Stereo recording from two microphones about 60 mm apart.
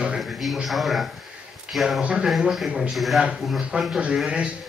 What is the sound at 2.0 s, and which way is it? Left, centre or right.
Speech, centre.